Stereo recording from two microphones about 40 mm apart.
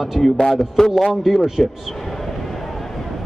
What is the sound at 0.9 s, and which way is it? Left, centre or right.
Speech, centre.